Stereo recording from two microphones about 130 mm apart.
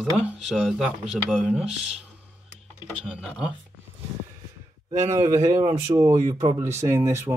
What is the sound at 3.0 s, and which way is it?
Speech, 10° right (ahead or behind).